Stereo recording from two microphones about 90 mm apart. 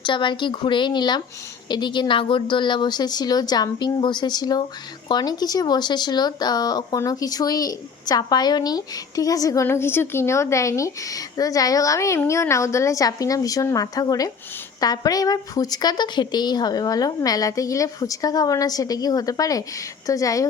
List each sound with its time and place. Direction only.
0.0 s a woman's voice: 65° left (ahead or behind); by 9.6 s 40° left (ahead or behind)
9.6 s a woman's voice: 25° left (ahead or behind)